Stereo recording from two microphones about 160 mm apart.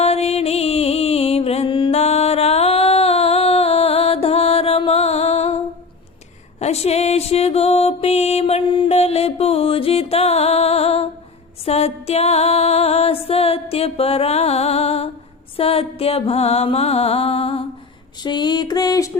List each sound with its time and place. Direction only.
0.0 s music: 40° left (ahead or behind)
6.6 s mantra: 40° left (ahead or behind)
11.6 s music: 40° left (ahead or behind)
18.2 s a sound: 25° left (ahead or behind)